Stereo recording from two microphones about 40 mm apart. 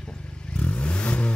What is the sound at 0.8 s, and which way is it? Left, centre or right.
Vehicle, left.